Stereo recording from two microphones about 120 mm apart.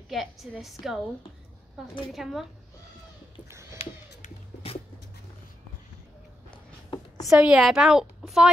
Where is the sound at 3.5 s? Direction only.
25° right (ahead or behind).